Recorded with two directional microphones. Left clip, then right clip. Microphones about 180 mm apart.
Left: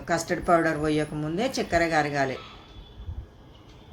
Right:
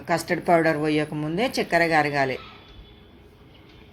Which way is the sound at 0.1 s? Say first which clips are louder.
Right 2 dB; 15° right (ahead or behind).